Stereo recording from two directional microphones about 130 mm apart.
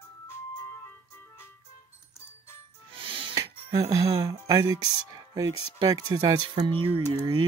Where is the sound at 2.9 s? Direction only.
45° right (ahead or behind).